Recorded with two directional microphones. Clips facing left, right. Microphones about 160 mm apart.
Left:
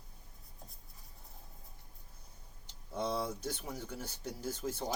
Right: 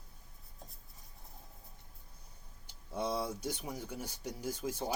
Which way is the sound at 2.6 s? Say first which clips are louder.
Even; 10° right (ahead or behind).